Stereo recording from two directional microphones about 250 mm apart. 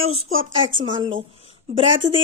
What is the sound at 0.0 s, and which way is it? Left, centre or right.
Speech, right.